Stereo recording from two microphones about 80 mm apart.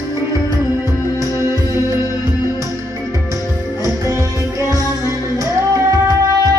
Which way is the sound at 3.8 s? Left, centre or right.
Right.